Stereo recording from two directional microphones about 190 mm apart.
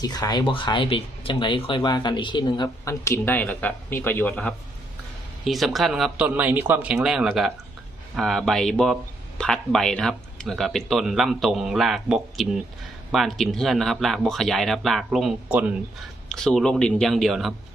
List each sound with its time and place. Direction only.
0.0 s speech: 20° left (ahead or behind); by 17.5 s centre (ahead or behind)